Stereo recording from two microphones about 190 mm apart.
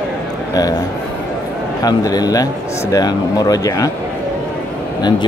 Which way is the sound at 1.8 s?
20° left (ahead or behind).